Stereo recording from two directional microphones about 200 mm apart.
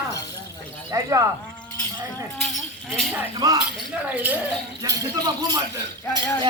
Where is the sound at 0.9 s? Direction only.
15° right (ahead or behind).